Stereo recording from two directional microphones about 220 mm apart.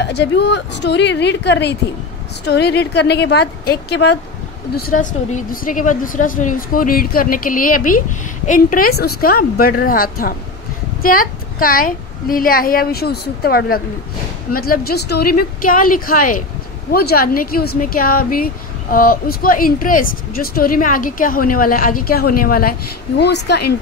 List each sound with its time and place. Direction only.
0.0 s a woman's voice: 50° left (ahead or behind)
4.7 s speech: 40° left (ahead or behind)